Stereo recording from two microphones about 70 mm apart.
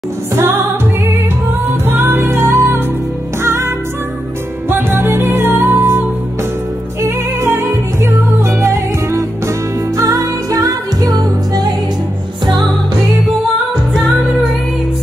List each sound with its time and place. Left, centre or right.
0.3 s music: right
9.9 s music: right